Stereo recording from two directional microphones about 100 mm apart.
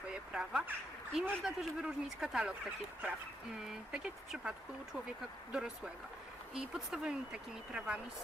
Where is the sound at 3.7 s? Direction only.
5° right (ahead or behind).